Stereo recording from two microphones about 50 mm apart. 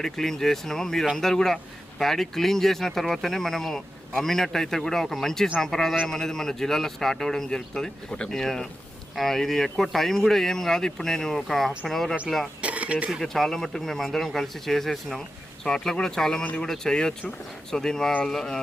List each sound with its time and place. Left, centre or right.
0.0 s speech: centre
12.6 s a sound: right
13.2 s speech: centre
16.4 s speech: left
16.6 s speech: centre